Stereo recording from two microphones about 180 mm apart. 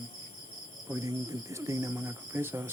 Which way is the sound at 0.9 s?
15° right (ahead or behind).